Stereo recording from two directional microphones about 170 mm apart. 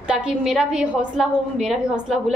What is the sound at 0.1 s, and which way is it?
A woman's voice, 5° right (ahead or behind).